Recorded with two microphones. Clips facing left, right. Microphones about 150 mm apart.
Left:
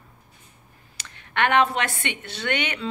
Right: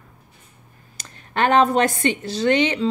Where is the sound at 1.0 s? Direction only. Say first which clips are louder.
Right 3 dB; 40° right (ahead or behind).